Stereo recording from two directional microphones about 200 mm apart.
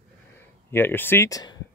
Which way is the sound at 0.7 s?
10° left (ahead or behind).